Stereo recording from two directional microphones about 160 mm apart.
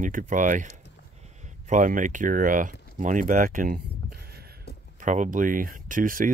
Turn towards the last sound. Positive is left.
turn(degrees=-60)  # may be behind; listen again after turning